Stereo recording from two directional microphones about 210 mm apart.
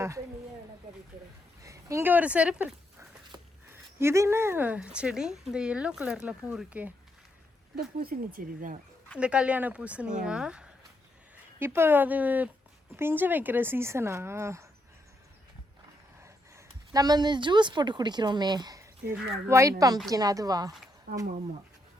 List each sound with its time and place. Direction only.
1.6 s speech: 15° right (ahead or behind)
7.9 s speech: 45° right (ahead or behind)
9.1 s speech: 5° right (ahead or behind)
16.2 s speech: 15° right (ahead or behind)